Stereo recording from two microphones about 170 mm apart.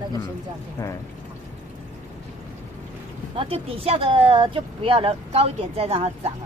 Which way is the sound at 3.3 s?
35° right (ahead or behind).